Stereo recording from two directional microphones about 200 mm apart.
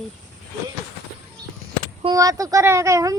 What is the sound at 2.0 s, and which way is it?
Speech, 15° right (ahead or behind).